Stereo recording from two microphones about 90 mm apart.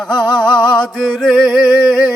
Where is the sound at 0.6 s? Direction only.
10° left (ahead or behind).